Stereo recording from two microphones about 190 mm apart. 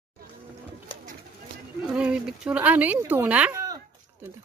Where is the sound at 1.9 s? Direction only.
5° right (ahead or behind).